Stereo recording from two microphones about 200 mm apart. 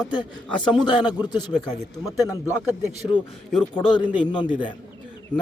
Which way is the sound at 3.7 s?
25° left (ahead or behind).